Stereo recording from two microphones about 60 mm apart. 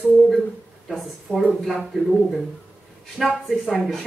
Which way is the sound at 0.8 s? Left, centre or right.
Centre.